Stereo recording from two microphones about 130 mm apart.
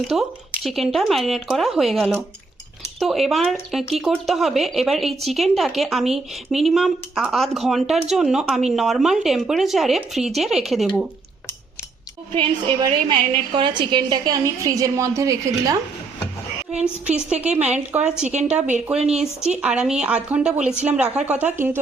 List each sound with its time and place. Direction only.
0.1 s a woman's voice: 5° right (ahead or behind)
12.3 s a woman's voice: 40° right (ahead or behind); by 15.7 s 25° right (ahead or behind)
17.1 s a woman's voice: 5° right (ahead or behind)
18.9 s speech: 50° right (ahead or behind)
19.5 s a woman's voice: 5° right (ahead or behind)